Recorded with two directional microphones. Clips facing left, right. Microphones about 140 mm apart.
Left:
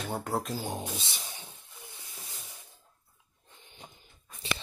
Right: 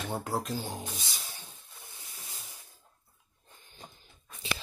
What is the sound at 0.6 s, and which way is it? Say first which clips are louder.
Speech: left 3 dB; 25° left (ahead or behind).